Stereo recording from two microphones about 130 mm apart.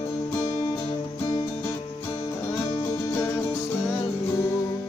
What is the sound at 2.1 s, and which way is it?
Music, 20° left (ahead or behind).